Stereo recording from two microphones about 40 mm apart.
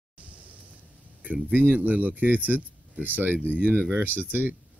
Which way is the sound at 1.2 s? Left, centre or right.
Right.